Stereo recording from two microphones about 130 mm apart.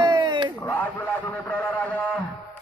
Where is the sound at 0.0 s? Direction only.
35° right (ahead or behind).